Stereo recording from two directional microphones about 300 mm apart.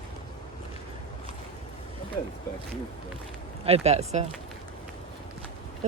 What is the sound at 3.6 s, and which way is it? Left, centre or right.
Speech, right.